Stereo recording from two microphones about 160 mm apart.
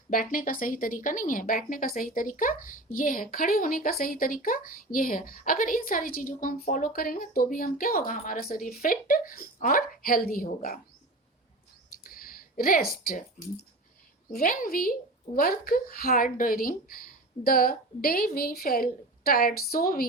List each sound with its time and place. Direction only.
0.1 s a woman's voice: 60° left (ahead or behind)
12.0 s a woman's voice: 65° left (ahead or behind)